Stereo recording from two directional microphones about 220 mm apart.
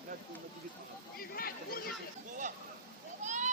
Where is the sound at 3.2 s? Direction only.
35° right (ahead or behind).